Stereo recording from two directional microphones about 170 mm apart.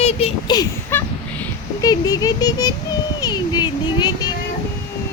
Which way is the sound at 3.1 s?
25° left (ahead or behind).